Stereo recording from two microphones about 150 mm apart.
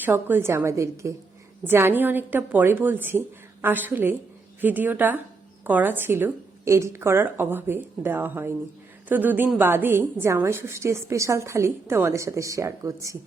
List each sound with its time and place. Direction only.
0.0 s a woman's voice: 15° right (ahead or behind)